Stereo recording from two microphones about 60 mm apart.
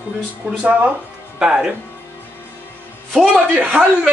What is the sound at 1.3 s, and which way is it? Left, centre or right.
Speech, centre.